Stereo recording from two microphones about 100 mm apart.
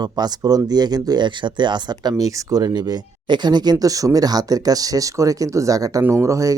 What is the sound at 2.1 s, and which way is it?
Speech, 35° right (ahead or behind).